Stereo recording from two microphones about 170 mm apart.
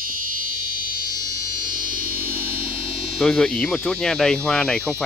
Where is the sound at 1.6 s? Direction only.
55° right (ahead or behind).